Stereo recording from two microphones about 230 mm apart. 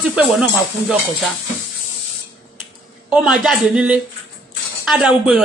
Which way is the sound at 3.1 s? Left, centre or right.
Centre.